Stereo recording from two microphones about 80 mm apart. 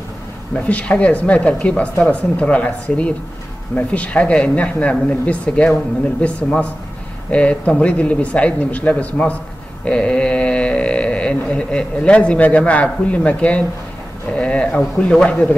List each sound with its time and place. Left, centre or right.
0.7 s speech: centre
7.2 s speech: centre
14.3 s a sound: centre
15.0 s speech: centre